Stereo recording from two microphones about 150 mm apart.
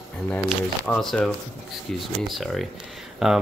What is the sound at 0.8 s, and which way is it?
Speech, 5° left (ahead or behind).